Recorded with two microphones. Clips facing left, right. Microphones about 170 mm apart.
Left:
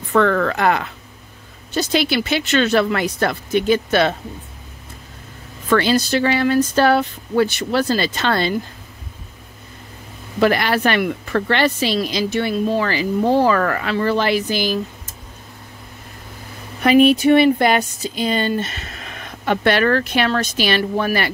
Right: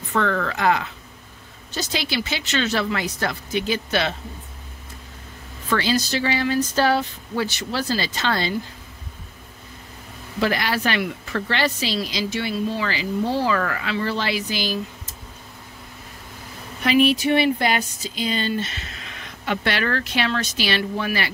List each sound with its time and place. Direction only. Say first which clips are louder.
0.1 s speech: left 6 dB; 55° left (ahead or behind)
5.7 s speech: left 6 dB; 55° left (ahead or behind)
10.4 s speech: left 6 dB; 60° left (ahead or behind)
16.8 s speech: left 6 dB; 50° left (ahead or behind)